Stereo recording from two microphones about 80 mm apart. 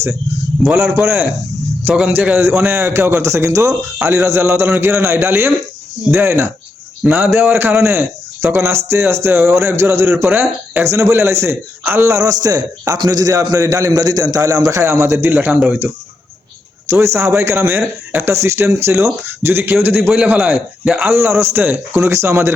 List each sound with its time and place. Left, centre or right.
1.0 s speech: right
1.9 s a man's voice: centre
2.6 s a man's voice: right
10.2 s speech: right
10.8 s a man's voice: right
15.4 s speech: centre
16.9 s a man's voice: right
20.1 s a man's voice: centre
21.1 s a man's voice: right